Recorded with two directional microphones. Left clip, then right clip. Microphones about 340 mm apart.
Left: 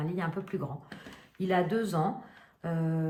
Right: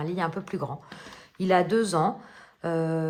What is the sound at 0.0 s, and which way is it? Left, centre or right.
Speech, centre.